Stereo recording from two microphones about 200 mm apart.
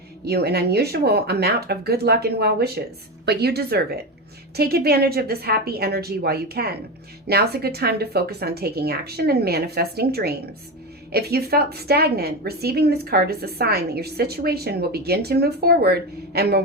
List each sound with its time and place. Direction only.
0.3 s a woman's voice: 55° right (ahead or behind)